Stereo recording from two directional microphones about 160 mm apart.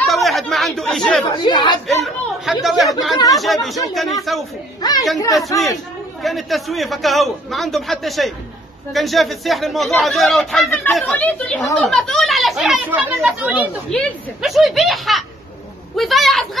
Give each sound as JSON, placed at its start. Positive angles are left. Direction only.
{"t": 0.0, "sound": "chatter", "side_deg": 0}
{"t": 1.3, "sound": "speech", "side_deg": 25}
{"t": 2.0, "sound": "a man's voice", "side_deg": 0}
{"t": 6.2, "sound": "a man's voice", "side_deg": 0}
{"t": 13.8, "sound": "a man's voice", "side_deg": 5}